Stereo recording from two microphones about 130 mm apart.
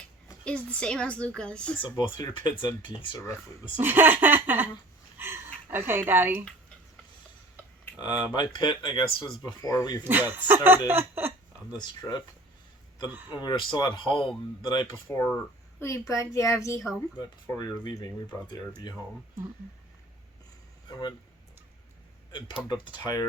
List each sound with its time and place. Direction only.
0.4 s a woman's voice: 10° left (ahead or behind)
1.8 s speech: 35° left (ahead or behind)
3.2 s speech: 25° left (ahead or behind)
3.8 s laughter: 15° right (ahead or behind)
5.1 s speech: 15° right (ahead or behind)
7.9 s speech: 35° left (ahead or behind)
9.5 s speech: 25° left (ahead or behind)
10.0 s laughter: 15° right (ahead or behind)
10.8 s a sound: 15° right (ahead or behind)
11.8 s speech: 30° left (ahead or behind)
13.3 s speech: 35° left (ahead or behind)
15.0 s speech: 20° left (ahead or behind)
22.3 s speech: 40° left (ahead or behind)